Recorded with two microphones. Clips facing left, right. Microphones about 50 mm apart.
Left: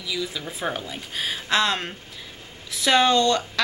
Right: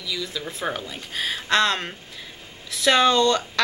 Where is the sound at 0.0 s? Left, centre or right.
Centre.